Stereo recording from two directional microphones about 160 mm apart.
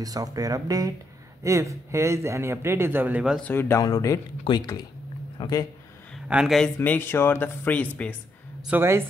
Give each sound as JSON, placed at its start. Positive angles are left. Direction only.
{"t": 0.0, "sound": "speech", "side_deg": -20}
{"t": 3.3, "sound": "speech", "side_deg": 10}
{"t": 6.2, "sound": "speech", "side_deg": -5}
{"t": 6.8, "sound": "speech", "side_deg": 15}
{"t": 8.6, "sound": "speech", "side_deg": -15}